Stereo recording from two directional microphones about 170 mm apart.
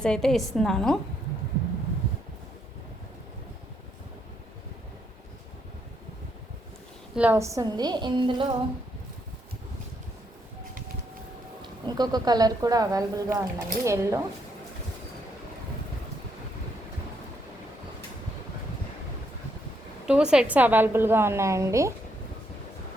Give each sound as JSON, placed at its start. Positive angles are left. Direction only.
{"t": 0.0, "sound": "a woman's voice", "side_deg": 5}
{"t": 7.2, "sound": "speech", "side_deg": -15}
{"t": 11.9, "sound": "speech", "side_deg": -25}
{"t": 20.1, "sound": "a woman's voice", "side_deg": -5}